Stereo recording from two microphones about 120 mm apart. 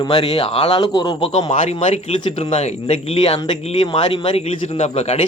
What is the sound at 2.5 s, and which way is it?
Speech, 65° left (ahead or behind).